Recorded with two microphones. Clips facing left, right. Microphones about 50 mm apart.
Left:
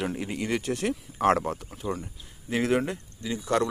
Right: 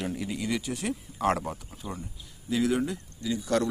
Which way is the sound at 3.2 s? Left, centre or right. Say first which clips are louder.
Left 1 dB; left.